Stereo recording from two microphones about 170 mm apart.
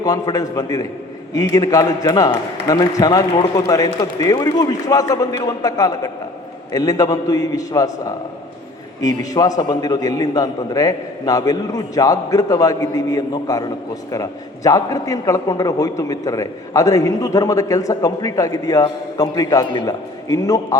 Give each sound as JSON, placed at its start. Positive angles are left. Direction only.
{"t": 0.0, "sound": "a man's voice", "side_deg": 20}